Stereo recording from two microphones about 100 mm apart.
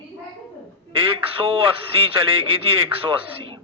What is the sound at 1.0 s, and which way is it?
A man's voice, 65° right (ahead or behind).